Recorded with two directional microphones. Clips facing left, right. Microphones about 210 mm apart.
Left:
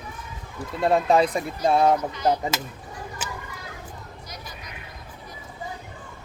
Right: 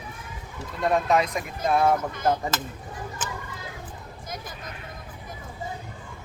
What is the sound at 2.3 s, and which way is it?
Speech, 15° left (ahead or behind).